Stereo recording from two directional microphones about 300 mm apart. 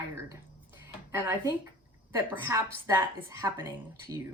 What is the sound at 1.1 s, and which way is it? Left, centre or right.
Speech, centre.